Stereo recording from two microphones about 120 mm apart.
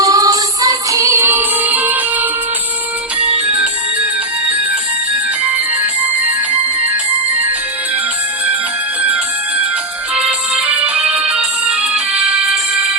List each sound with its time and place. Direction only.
0.0 s music: 30° right (ahead or behind)
10.2 s music: 10° right (ahead or behind)